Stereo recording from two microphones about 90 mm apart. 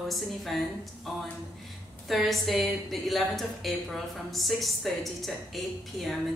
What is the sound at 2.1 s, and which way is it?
A woman's voice, centre (ahead or behind).